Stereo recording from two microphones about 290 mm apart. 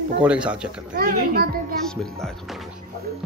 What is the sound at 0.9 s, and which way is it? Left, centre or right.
Speech, right.